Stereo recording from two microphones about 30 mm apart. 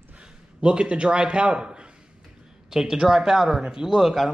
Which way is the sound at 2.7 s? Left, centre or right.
Centre.